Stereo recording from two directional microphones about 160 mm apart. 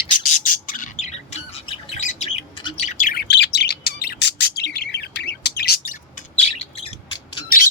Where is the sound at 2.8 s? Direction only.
50° left (ahead or behind); by 5.9 s 80° left.